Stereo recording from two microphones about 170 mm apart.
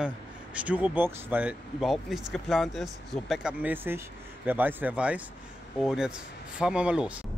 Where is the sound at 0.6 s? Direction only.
10° right (ahead or behind).